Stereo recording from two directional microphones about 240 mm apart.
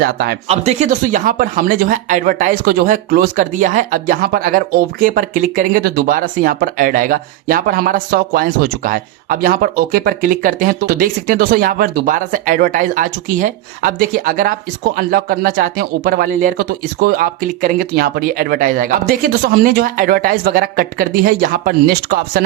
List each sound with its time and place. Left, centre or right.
0.0 s speech: right
0.4 s speech: right